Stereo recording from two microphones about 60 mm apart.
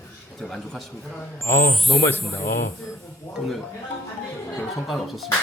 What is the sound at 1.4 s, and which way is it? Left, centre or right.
Speech, left.